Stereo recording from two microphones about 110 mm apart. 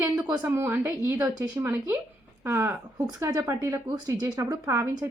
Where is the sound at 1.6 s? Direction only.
20° right (ahead or behind).